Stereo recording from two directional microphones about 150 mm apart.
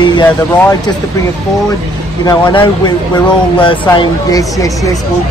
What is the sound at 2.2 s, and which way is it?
Speech, 35° left (ahead or behind).